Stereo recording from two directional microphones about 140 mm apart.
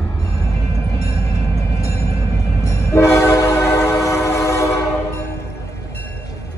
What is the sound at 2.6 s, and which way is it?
Train, 20° left (ahead or behind).